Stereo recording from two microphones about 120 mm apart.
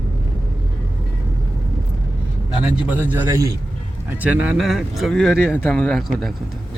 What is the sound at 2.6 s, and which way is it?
A man's voice, 10° right (ahead or behind).